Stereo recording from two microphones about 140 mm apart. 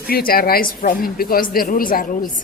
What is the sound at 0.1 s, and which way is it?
A woman's voice, 90° left.